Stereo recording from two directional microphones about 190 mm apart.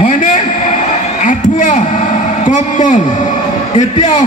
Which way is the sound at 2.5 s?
40° left (ahead or behind).